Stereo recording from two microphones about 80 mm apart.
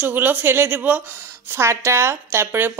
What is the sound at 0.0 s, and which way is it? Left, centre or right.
A woman's voice, right.